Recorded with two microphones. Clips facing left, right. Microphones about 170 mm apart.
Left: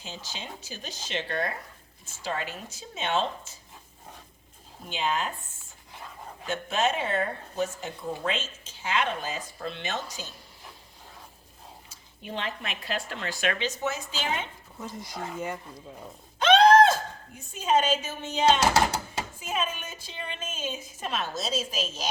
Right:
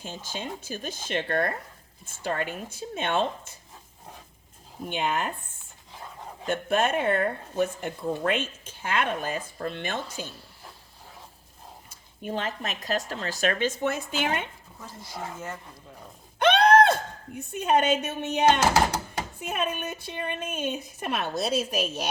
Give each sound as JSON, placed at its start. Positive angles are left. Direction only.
{"t": 0.0, "sound": "speech", "side_deg": -50}
{"t": 4.9, "sound": "speech", "side_deg": -55}
{"t": 6.5, "sound": "speech", "side_deg": -55}
{"t": 11.9, "sound": "speech", "side_deg": -45}
{"t": 14.8, "sound": "speech", "side_deg": 20}
{"t": 16.4, "sound": "a sound", "side_deg": -60}
{"t": 19.4, "sound": "speech", "side_deg": -60}